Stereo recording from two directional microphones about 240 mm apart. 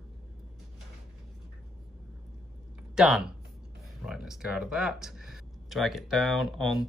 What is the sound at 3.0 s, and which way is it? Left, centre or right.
Speech, centre.